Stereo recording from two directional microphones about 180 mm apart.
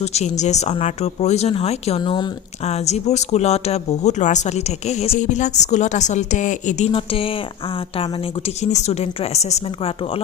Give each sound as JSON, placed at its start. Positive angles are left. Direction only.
{"t": 0.0, "sound": "speech", "side_deg": 35}
{"t": 2.0, "sound": "speech", "side_deg": 25}
{"t": 2.6, "sound": "speech", "side_deg": 40}
{"t": 8.6, "sound": "speech", "side_deg": 40}